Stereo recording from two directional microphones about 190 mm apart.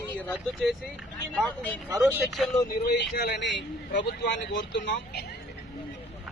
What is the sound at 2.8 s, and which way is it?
Speech, 55° left (ahead or behind).